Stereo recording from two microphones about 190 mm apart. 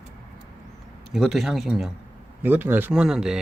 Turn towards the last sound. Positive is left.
turn(degrees=0)  # may be behind; listen again after turning